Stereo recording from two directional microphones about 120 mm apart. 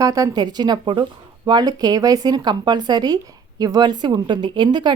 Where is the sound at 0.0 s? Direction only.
30° right (ahead or behind).